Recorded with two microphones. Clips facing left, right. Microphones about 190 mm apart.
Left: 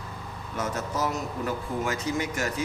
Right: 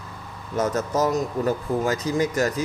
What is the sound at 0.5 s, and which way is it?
Speech, 40° right (ahead or behind).